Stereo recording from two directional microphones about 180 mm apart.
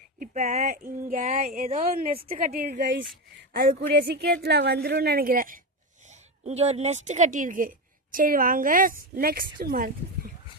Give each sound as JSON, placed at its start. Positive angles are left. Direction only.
{"t": 0.2, "sound": "speech", "side_deg": -40}
{"t": 0.8, "sound": "a woman's voice", "side_deg": -50}
{"t": 3.5, "sound": "a woman's voice", "side_deg": -55}
{"t": 6.4, "sound": "a woman's voice", "side_deg": -35}